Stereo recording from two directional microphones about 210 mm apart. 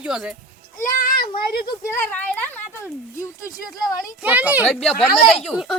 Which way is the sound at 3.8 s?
5° right (ahead or behind).